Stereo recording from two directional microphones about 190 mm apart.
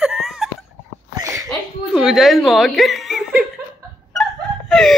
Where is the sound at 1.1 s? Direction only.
15° right (ahead or behind).